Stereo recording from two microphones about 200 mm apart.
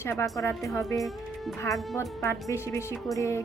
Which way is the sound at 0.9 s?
Centre (ahead or behind).